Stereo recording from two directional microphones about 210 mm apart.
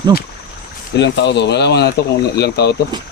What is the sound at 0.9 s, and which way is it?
Speech, 55° left (ahead or behind).